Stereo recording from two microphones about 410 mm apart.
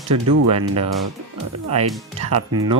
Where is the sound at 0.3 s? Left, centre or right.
Right.